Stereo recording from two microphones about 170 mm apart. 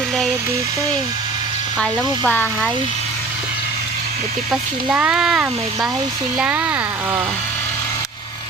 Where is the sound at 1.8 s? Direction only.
5° left (ahead or behind).